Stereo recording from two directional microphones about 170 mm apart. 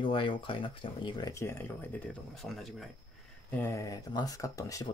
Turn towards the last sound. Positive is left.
turn(degrees=20)  # may be behind; listen again after turning